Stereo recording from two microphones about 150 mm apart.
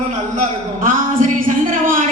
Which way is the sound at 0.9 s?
60° right (ahead or behind).